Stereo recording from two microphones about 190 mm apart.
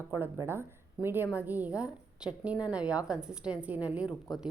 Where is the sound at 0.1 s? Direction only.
15° right (ahead or behind).